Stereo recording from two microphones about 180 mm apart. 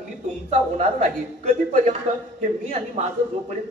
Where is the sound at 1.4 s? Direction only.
40° right (ahead or behind).